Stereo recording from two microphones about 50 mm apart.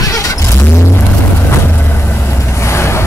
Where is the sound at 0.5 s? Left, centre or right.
Left.